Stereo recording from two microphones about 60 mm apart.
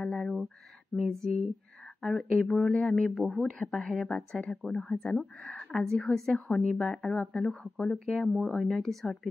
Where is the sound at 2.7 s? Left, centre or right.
Centre.